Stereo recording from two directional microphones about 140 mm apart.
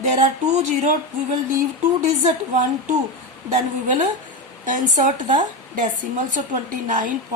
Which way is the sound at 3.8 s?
65° right (ahead or behind).